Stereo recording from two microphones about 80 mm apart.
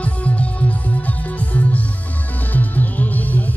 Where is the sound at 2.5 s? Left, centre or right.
Centre.